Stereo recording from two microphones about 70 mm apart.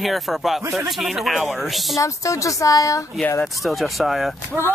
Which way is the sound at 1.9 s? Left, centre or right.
Left.